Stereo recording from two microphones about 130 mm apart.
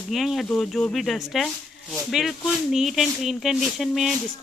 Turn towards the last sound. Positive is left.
turn(degrees=0)  # may be behind; listen again after turning